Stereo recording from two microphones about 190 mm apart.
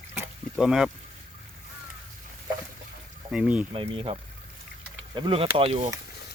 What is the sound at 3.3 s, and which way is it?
Speech, 5° right (ahead or behind).